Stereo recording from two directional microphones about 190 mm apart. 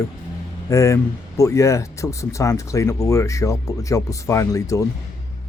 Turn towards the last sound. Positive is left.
turn(degrees=15)  # may be behind; listen again after turning